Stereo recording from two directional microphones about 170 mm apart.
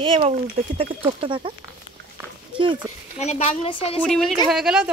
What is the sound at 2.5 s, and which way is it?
Speech, 30° right (ahead or behind).